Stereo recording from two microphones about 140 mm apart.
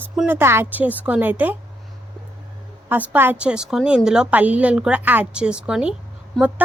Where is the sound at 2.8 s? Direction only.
10° right (ahead or behind).